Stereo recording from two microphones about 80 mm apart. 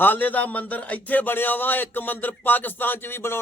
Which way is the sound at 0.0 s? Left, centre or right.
Left.